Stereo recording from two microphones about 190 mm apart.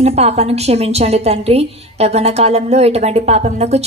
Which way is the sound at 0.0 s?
35° right (ahead or behind).